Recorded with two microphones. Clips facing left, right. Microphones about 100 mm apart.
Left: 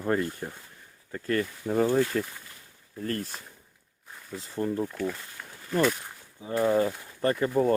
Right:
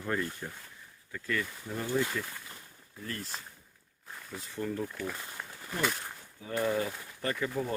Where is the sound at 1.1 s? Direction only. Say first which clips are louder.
Left 6 dB; 45° left (ahead or behind).